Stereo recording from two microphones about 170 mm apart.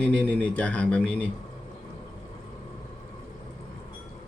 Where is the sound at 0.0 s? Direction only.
5° left (ahead or behind).